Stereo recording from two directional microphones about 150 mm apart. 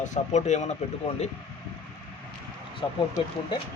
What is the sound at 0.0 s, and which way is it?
Speech, 55° left (ahead or behind).